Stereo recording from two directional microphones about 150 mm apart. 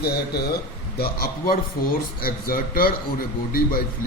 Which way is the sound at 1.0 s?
80° left.